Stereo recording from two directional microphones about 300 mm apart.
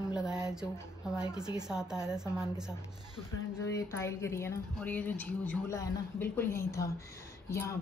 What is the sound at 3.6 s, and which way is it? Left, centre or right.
A woman's voice, centre.